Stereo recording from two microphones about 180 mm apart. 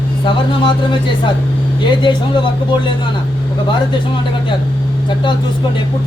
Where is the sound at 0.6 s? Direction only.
25° left (ahead or behind).